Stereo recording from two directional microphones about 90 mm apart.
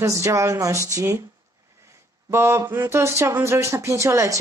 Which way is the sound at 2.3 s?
30° right (ahead or behind).